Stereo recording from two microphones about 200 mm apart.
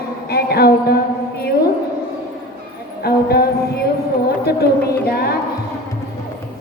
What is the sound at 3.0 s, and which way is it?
Speech, 50° left (ahead or behind).